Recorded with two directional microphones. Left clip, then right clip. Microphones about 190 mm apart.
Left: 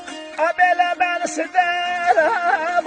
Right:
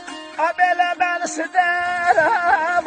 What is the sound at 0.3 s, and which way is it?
Music, 45° left (ahead or behind).